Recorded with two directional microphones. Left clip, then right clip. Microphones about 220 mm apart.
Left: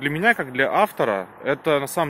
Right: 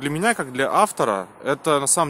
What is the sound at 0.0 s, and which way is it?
Speech, 15° right (ahead or behind).